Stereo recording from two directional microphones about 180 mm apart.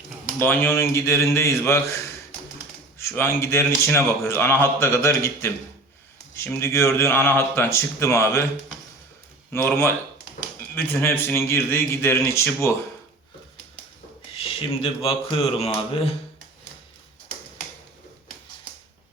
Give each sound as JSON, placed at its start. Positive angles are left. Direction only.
{"t": 0.3, "sound": "a man's voice", "side_deg": 10}
{"t": 3.0, "sound": "a man's voice", "side_deg": 15}
{"t": 9.5, "sound": "a man's voice", "side_deg": 10}
{"t": 14.4, "sound": "speech", "side_deg": 30}